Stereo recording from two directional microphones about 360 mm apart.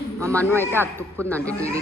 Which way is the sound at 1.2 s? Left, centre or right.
Centre.